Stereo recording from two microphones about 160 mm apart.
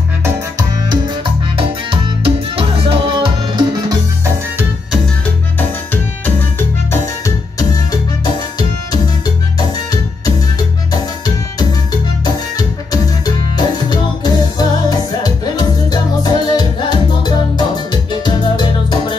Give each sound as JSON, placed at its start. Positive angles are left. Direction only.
{"t": 0.2, "sound": "music", "side_deg": -20}
{"t": 1.6, "sound": "music", "side_deg": -35}
{"t": 6.9, "sound": "music", "side_deg": 20}
{"t": 12.5, "sound": "music", "side_deg": 25}